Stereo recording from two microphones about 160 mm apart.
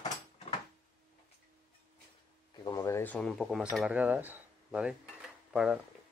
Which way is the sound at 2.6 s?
20° left (ahead or behind).